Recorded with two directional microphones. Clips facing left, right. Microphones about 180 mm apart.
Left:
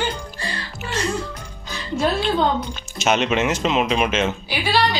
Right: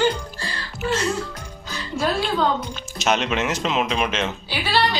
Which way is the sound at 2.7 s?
Centre (ahead or behind).